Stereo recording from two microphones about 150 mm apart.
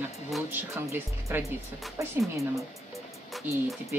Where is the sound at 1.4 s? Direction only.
Centre (ahead or behind).